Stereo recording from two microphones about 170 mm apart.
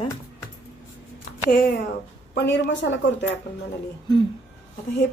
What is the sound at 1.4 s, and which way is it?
Speech, 65° left (ahead or behind).